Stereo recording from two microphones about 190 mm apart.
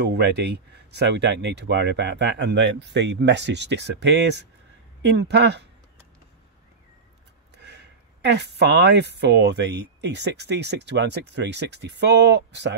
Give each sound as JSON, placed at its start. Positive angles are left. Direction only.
{"t": 0.0, "sound": "speech", "side_deg": -60}
{"t": 7.6, "sound": "a sound", "side_deg": -65}
{"t": 9.1, "sound": "speech", "side_deg": -65}